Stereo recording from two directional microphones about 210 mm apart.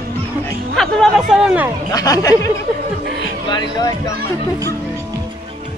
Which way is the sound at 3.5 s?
20° left (ahead or behind).